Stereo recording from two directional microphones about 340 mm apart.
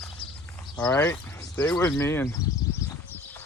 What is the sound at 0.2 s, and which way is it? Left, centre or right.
Clip-clop, centre.